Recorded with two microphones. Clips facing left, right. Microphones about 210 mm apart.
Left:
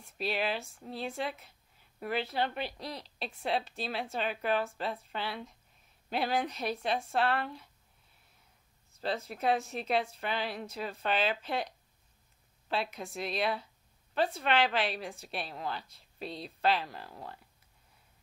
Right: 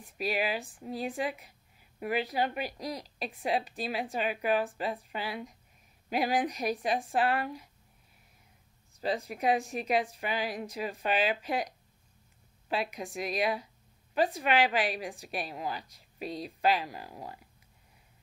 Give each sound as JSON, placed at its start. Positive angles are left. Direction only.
{"t": 0.0, "sound": "speech", "side_deg": -10}
{"t": 9.0, "sound": "speech", "side_deg": -15}